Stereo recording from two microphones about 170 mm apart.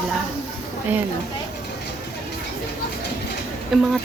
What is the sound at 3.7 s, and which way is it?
Speech, centre (ahead or behind).